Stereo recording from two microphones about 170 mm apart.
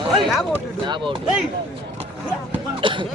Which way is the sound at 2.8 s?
30° right (ahead or behind).